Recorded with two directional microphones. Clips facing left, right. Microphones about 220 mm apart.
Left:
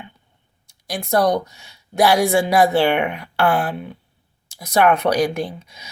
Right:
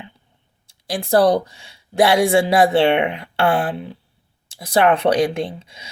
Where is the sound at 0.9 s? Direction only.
30° right (ahead or behind).